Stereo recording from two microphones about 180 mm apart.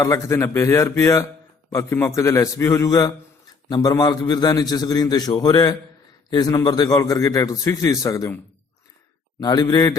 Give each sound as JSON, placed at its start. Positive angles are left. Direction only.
{"t": 0.0, "sound": "a man's voice", "side_deg": 15}
{"t": 9.4, "sound": "a man's voice", "side_deg": 20}